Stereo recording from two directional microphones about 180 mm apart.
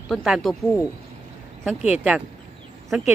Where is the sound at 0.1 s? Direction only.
Centre (ahead or behind).